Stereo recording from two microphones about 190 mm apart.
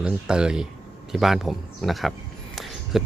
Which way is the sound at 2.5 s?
Centre (ahead or behind).